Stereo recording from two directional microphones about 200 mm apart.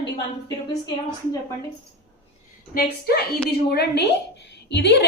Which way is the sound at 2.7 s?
55° left (ahead or behind).